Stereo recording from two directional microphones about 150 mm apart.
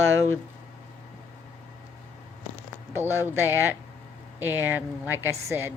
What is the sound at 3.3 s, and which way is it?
A woman's voice, 15° right (ahead or behind).